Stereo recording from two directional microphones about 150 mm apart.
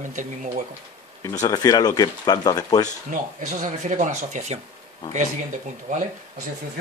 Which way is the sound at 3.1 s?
60° right (ahead or behind).